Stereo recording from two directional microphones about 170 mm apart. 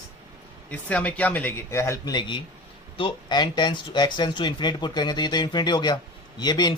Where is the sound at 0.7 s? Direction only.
10° left (ahead or behind).